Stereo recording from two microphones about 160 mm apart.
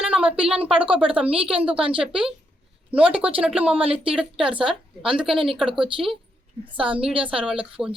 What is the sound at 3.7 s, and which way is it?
Speech, 35° right (ahead or behind).